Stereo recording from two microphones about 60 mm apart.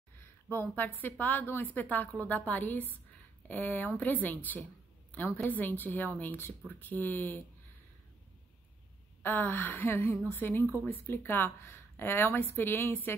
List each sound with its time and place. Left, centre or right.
0.5 s a woman's voice: left
9.2 s speech: left